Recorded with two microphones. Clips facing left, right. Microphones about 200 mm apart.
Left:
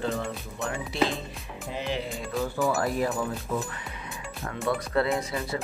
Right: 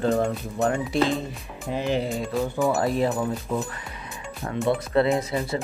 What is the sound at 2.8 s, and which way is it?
Speech, 25° right (ahead or behind).